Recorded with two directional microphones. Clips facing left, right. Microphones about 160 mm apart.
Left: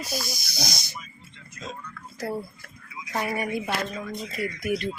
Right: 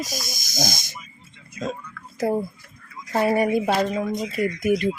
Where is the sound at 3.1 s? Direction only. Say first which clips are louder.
Right 9 dB; 35° right (ahead or behind).